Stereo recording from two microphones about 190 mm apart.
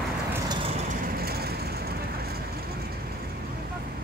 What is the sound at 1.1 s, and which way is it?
Vehicle, 55° right (ahead or behind).